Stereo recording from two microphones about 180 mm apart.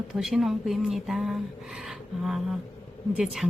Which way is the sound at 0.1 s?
Centre (ahead or behind).